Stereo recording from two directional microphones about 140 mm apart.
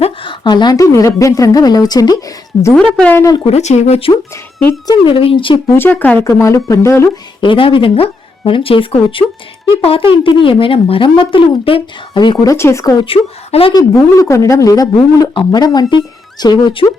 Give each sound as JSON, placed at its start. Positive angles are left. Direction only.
{"t": 0.0, "sound": "a woman's voice", "side_deg": 35}
{"t": 2.7, "sound": "speech", "side_deg": 5}
{"t": 3.3, "sound": "speech", "side_deg": 45}
{"t": 4.9, "sound": "speech", "side_deg": 40}
{"t": 5.7, "sound": "a woman's voice", "side_deg": 15}
{"t": 7.4, "sound": "speech", "side_deg": 40}
{"t": 13.1, "sound": "speech", "side_deg": 40}
{"t": 13.7, "sound": "a woman's voice", "side_deg": 25}